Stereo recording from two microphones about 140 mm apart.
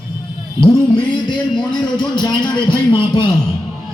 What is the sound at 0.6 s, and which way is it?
Music, 40° left (ahead or behind).